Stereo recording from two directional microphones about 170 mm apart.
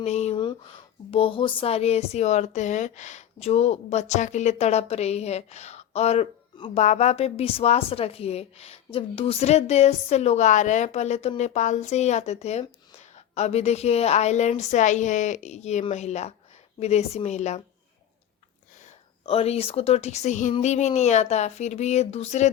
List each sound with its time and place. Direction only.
0.0 s speech: 40° left (ahead or behind)
19.2 s speech: 35° left (ahead or behind)